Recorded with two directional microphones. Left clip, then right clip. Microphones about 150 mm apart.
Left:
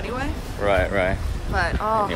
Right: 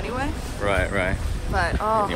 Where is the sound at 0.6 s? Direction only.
20° left (ahead or behind).